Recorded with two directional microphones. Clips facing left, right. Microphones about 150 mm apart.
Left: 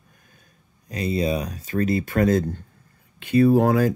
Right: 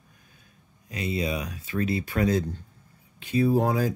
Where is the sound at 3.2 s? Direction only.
60° left (ahead or behind).